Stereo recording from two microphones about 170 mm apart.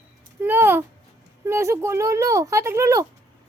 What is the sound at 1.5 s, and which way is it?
Speech, 15° right (ahead or behind).